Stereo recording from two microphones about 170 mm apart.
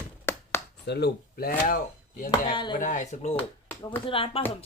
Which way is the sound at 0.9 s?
75° left (ahead or behind).